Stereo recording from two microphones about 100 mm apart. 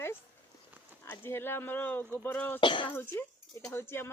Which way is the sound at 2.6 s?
55° left (ahead or behind).